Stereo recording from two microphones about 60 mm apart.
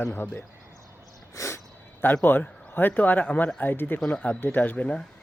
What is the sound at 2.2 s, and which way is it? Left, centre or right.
A man's voice, left.